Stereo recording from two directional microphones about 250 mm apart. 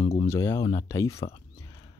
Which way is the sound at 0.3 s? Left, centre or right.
Centre.